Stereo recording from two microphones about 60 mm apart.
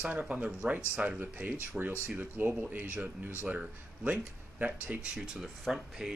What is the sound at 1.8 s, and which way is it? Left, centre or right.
Speech, centre.